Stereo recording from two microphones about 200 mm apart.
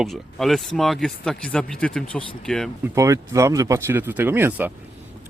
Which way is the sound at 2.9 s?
15° right (ahead or behind).